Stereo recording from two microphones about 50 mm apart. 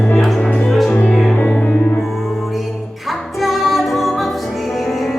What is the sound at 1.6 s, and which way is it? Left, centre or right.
Music, left.